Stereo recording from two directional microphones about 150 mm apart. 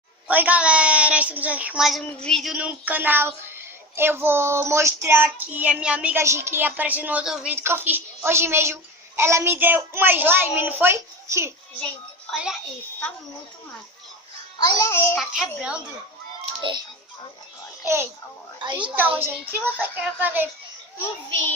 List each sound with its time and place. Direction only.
0.3 s child singing: 10° right (ahead or behind)
12.3 s a child's voice: 5° right (ahead or behind)
14.8 s a child's voice: 15° left (ahead or behind)
15.2 s a child's voice: 5° right (ahead or behind)
17.8 s child singing: 15° right (ahead or behind)
18.6 s a woman's voice: 30° right (ahead or behind)
19.1 s child singing: 15° right (ahead or behind)